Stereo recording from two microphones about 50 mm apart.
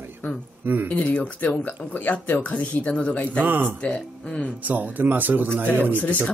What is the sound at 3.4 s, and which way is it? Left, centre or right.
Speech, right.